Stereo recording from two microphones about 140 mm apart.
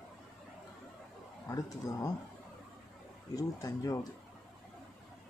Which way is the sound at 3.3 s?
25° left (ahead or behind).